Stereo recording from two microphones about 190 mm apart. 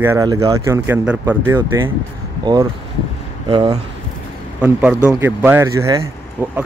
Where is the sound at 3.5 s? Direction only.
30° right (ahead or behind).